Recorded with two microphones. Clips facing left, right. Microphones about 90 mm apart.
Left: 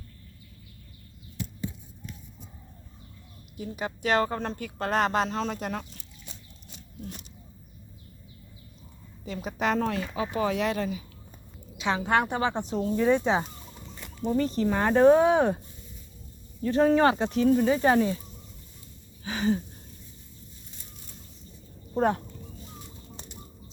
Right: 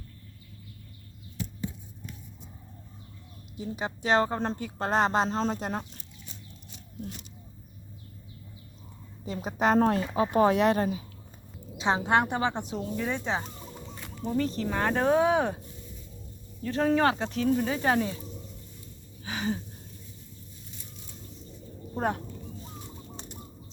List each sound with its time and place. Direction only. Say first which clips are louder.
3.6 s a woman's voice: left 1 dB; 25° right (ahead or behind)
9.2 s speech: right 2 dB; 35° right (ahead or behind)
10.2 s speech: right 5 dB; 50° right (ahead or behind)
11.8 s a woman's voice: right 1 dB; 30° right (ahead or behind)
12.6 s speech: left 5 dB; 5° right (ahead or behind)
13.0 s speech: left 8 dB; 15° left (ahead or behind)
14.3 s speech: left 3 dB; 5° left (ahead or behind)
16.6 s speech: left 3 dB; 5° left (ahead or behind)
19.2 s a sound: left 5 dB; 5° right (ahead or behind)
21.9 s speech: left 5 dB; 5° right (ahead or behind)